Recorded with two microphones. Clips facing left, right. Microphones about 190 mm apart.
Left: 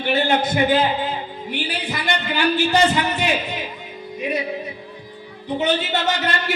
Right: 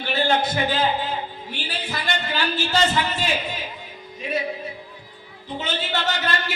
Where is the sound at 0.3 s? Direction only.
20° left (ahead or behind).